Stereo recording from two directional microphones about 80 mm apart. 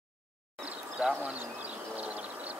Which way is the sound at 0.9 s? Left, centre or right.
Centre.